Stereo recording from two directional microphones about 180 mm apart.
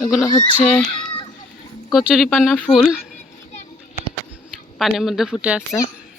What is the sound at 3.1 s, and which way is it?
Children playing, 40° left (ahead or behind).